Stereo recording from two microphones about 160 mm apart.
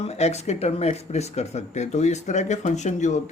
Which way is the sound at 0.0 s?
40° left (ahead or behind).